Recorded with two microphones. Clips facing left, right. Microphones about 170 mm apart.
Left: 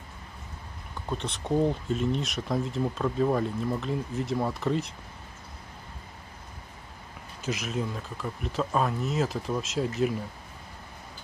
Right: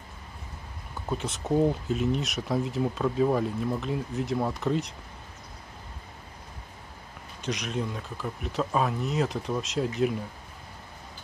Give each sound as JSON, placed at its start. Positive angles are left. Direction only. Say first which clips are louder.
{"t": 1.0, "sound": "speech", "louder": "right 2 dB", "side_deg": -5}
{"t": 7.4, "sound": "speech", "louder": "even", "side_deg": 5}